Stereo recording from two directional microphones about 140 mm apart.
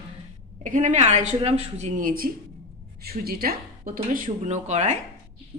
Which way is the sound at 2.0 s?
90° right.